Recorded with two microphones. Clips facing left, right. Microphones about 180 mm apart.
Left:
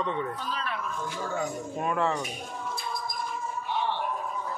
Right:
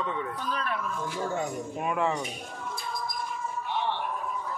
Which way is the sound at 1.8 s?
10° right (ahead or behind).